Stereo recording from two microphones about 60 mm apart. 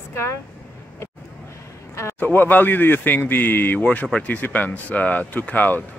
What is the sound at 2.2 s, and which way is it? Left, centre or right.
Speech, left.